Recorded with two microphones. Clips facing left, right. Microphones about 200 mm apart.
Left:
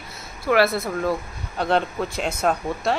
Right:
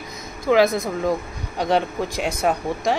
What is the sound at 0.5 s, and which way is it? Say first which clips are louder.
Speech: right 2 dB; 15° right (ahead or behind).